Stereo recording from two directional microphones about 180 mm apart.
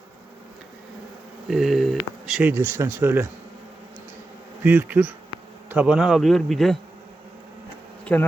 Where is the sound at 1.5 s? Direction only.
Centre (ahead or behind).